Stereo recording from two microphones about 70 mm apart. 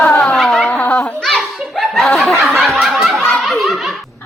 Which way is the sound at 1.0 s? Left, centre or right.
Centre.